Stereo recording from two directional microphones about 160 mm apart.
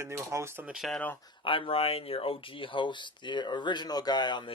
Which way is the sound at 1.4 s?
35° left (ahead or behind).